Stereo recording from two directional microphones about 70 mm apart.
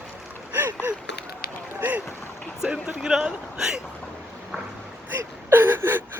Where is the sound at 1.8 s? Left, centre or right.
Right.